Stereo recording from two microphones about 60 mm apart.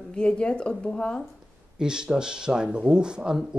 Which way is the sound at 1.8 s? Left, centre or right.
Centre.